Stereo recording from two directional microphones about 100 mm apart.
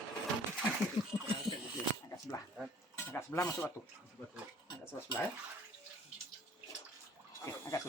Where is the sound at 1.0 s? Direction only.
55° left (ahead or behind).